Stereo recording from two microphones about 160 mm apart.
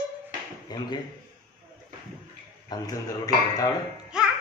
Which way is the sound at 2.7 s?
25° left (ahead or behind).